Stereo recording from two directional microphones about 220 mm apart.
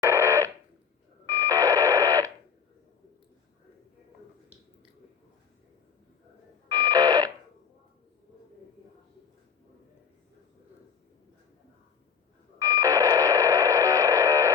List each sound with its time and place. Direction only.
0.0 s fire alarm: 10° right (ahead or behind)
1.3 s radio: 15° right (ahead or behind)
6.7 s fire alarm: 15° right (ahead or behind)
12.5 s radio: 15° right (ahead or behind)